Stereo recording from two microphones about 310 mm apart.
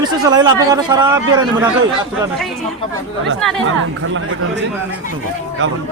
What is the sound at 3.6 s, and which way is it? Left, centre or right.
Speech, right.